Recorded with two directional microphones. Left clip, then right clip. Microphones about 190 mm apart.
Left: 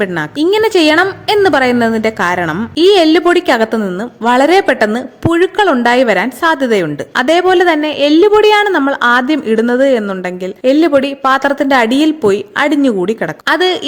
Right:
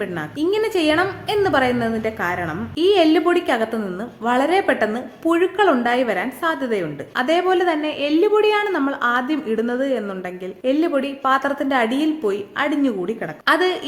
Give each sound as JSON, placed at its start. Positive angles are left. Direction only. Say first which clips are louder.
{"t": 0.0, "sound": "a woman's voice", "louder": "left 9 dB", "side_deg": 50}